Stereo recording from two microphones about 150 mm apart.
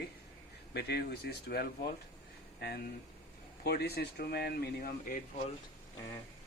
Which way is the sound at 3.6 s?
90° left.